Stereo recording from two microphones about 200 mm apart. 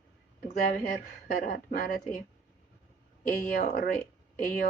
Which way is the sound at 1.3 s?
45° left (ahead or behind).